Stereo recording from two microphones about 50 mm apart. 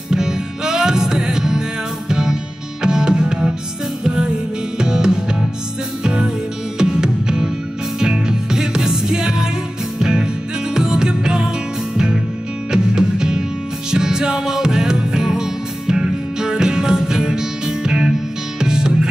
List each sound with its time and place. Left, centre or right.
0.1 s music: centre
12.7 s music: centre